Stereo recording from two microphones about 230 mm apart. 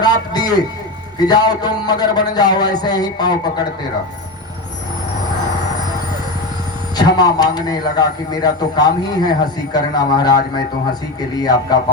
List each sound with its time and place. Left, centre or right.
0.0 s a sound: centre
1.2 s a man's voice: centre
6.9 s a man's voice: centre